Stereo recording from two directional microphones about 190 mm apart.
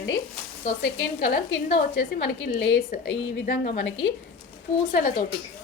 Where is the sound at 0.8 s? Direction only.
60° left (ahead or behind).